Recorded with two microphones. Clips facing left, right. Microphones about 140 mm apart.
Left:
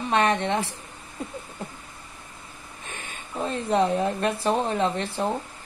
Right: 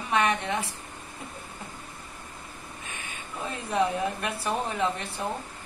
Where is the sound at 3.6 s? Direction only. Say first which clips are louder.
Left 4 dB; 30° left (ahead or behind).